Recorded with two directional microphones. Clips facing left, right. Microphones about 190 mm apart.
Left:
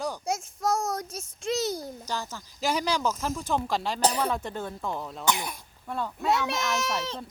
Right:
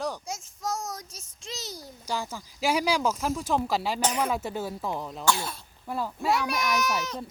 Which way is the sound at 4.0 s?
35° left (ahead or behind).